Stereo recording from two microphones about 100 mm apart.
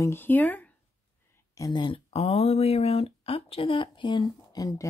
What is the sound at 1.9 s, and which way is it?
Speech, 90° left.